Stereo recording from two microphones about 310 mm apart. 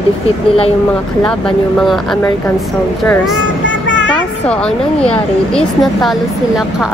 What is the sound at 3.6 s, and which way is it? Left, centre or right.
Vehicle, left.